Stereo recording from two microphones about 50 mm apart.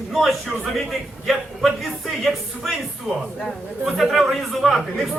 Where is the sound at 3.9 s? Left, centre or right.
Centre.